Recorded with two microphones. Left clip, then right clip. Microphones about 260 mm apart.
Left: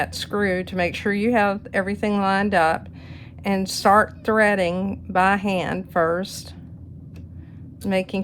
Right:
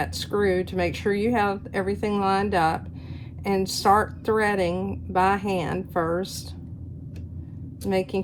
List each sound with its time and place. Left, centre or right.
0.0 s a woman's voice: left
7.9 s a woman's voice: left